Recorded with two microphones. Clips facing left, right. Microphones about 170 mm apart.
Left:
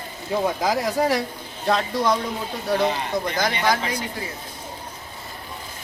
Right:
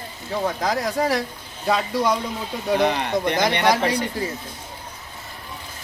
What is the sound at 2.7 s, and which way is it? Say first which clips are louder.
Speech: right 2 dB; 65° right (ahead or behind).